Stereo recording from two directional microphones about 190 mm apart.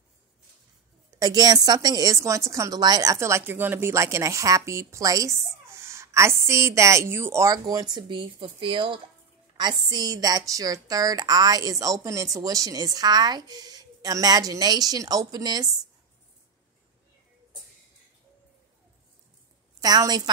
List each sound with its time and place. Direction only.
1.2 s a woman's voice: 20° right (ahead or behind)
19.8 s a woman's voice: 20° right (ahead or behind)